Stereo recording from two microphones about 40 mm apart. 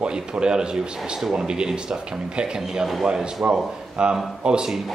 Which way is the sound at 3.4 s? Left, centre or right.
Right.